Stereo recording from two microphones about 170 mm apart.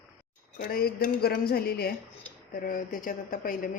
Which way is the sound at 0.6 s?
65° left (ahead or behind).